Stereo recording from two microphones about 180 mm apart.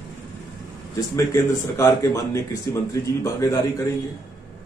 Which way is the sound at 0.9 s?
15° left (ahead or behind).